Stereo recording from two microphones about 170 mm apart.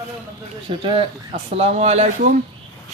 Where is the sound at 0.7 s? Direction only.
35° right (ahead or behind).